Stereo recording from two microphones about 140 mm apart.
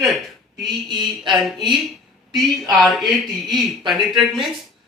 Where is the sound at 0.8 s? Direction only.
30° right (ahead or behind).